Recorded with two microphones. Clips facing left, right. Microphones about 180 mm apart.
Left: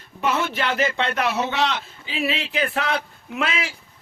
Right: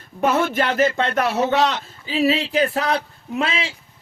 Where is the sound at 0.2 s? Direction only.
45° right (ahead or behind); by 3.8 s 30° right (ahead or behind).